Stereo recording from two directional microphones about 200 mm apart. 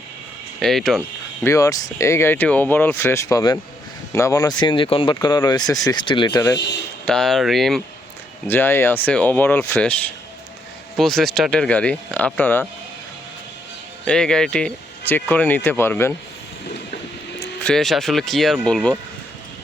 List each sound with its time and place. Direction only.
0.6 s speech: centre (ahead or behind)
1.5 s speech: 15° left (ahead or behind)
7.0 s speech: centre (ahead or behind)
8.4 s speech: 10° left (ahead or behind)
14.0 s speech: 5° left (ahead or behind)
17.6 s speech: 5° left (ahead or behind)